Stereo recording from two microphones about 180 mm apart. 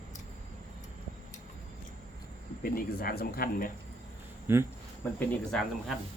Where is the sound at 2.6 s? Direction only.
55° left (ahead or behind).